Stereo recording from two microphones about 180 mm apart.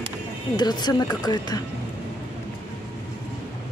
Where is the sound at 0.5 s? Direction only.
25° left (ahead or behind).